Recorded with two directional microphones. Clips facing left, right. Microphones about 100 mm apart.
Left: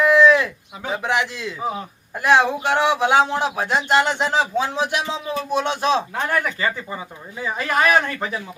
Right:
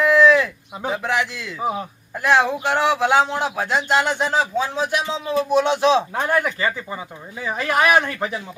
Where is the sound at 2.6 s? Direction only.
Centre (ahead or behind).